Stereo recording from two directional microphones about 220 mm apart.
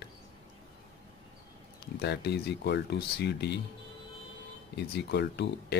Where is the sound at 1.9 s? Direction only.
50° left (ahead or behind).